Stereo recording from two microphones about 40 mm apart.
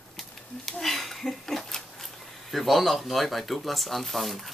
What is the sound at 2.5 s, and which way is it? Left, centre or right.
Speech, centre.